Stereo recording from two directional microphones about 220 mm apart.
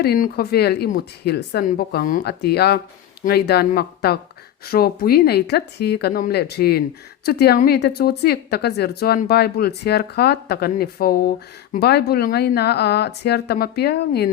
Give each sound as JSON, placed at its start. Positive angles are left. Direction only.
{"t": 0.0, "sound": "speech", "side_deg": 45}